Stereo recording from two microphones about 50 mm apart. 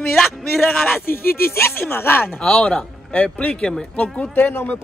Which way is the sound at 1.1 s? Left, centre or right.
Left.